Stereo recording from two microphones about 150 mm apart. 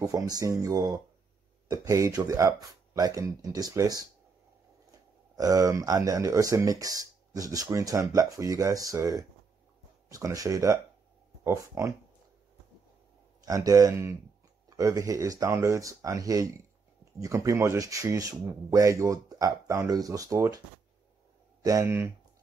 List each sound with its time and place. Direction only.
0.0 s speech: 25° right (ahead or behind)
5.3 s speech: 25° right (ahead or behind)
13.5 s speech: 25° right (ahead or behind)
21.6 s speech: 20° right (ahead or behind)